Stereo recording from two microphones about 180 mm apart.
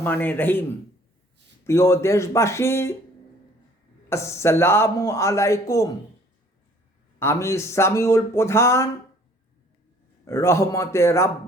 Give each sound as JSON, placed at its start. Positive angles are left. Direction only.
{"t": 0.0, "sound": "speech", "side_deg": 10}
{"t": 1.6, "sound": "speech", "side_deg": 15}
{"t": 4.1, "sound": "speech", "side_deg": 15}
{"t": 7.2, "sound": "speech", "side_deg": 15}
{"t": 10.2, "sound": "speech", "side_deg": 15}